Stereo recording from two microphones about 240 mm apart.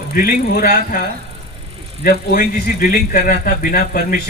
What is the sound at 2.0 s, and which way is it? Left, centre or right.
A man's voice, left.